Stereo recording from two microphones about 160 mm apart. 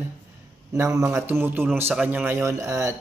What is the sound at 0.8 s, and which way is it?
Speech, 20° right (ahead or behind).